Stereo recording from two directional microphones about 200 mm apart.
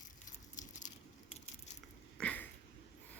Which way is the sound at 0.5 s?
40° left (ahead or behind).